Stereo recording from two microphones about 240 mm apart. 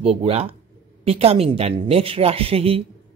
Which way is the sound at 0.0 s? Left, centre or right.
Right.